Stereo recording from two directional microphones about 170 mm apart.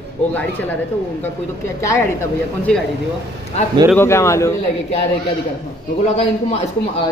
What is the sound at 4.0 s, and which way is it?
Speech, 15° left (ahead or behind).